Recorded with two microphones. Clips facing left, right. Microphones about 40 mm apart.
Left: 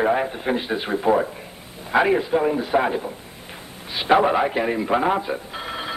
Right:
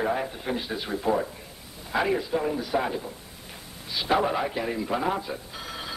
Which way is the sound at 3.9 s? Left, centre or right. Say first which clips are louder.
Left 7 dB; left.